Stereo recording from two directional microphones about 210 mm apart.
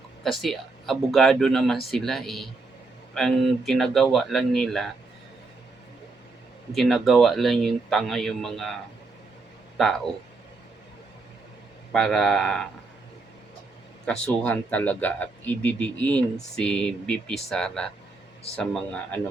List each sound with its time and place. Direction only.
0.2 s speech: centre (ahead or behind)
6.7 s speech: centre (ahead or behind)
9.7 s speech: centre (ahead or behind)
11.9 s speech: 5° left (ahead or behind)
14.1 s speech: 5° left (ahead or behind)